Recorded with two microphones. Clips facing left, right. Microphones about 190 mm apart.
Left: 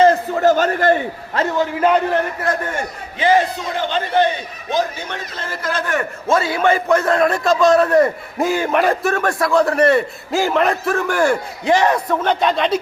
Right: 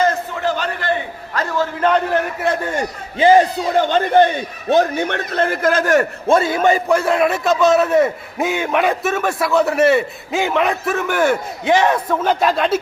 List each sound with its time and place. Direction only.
0.0 s a sound: 35° left (ahead or behind)
1.3 s a man's voice: 25° left (ahead or behind)
1.8 s a man's voice: 5° left (ahead or behind)
3.2 s speech: 35° right (ahead or behind)
3.8 s speech: 50° right (ahead or behind)
4.7 s a man's voice: 60° right (ahead or behind); by 6.1 s 40° right (ahead or behind)
6.5 s a man's voice: 15° right (ahead or behind)